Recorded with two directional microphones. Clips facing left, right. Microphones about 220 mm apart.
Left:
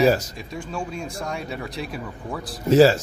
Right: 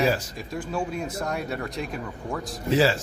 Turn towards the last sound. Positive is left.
turn(degrees=40)  # may be behind; listen again after turning